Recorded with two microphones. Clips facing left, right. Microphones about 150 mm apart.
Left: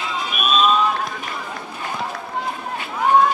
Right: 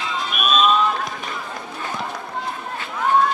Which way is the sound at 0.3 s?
Centre (ahead or behind).